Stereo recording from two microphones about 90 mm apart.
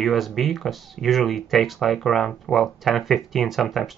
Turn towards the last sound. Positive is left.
turn(degrees=0)  # may be behind; listen again after turning